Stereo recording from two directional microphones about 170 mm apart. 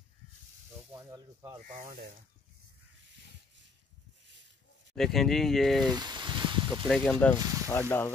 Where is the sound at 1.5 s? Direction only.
50° right (ahead or behind).